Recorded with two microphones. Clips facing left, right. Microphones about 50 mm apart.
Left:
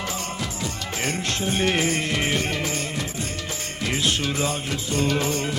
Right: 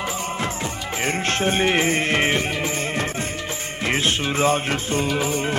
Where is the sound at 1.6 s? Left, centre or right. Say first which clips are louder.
Even; right.